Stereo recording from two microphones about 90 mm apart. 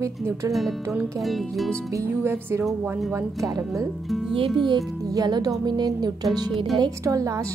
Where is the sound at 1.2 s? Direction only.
Centre (ahead or behind).